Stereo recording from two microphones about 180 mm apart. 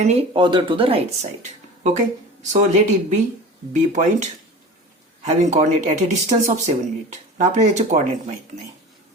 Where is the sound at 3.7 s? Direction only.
45° right (ahead or behind).